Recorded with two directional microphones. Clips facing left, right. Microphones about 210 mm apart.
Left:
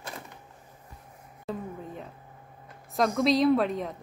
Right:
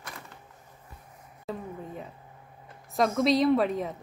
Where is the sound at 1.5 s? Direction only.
Centre (ahead or behind).